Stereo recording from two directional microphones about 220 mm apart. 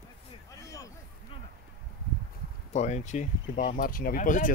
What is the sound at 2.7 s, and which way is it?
Speech, 30° left (ahead or behind).